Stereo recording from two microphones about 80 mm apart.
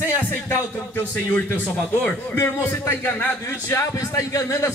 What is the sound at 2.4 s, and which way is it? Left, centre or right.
A man's voice, left.